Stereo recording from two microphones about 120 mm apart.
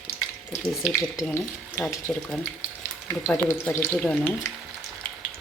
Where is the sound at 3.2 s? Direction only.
15° left (ahead or behind).